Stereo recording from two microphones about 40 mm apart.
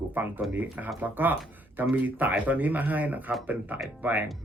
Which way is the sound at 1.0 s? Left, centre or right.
Right.